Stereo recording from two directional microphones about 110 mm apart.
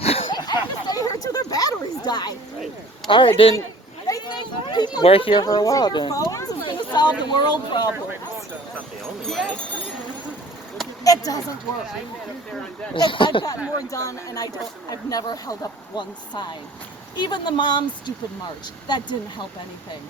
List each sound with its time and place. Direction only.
0.0 s a sound: 65° left (ahead or behind)
0.3 s chatter: 40° left (ahead or behind)
3.1 s speech: 50° left (ahead or behind)
4.0 s a sound: 35° left (ahead or behind)
5.0 s speech: 60° left (ahead or behind)
5.3 s speech: 40° left (ahead or behind)
9.2 s speech: 5° left (ahead or behind)
11.0 s speech: 30° left (ahead or behind)
12.9 s speech: 50° left (ahead or behind)
13.9 s speech: 30° left (ahead or behind)